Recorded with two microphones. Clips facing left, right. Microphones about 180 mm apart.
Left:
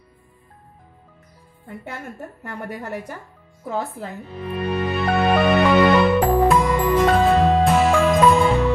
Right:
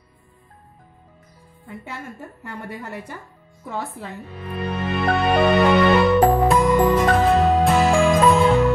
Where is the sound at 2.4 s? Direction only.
50° left (ahead or behind).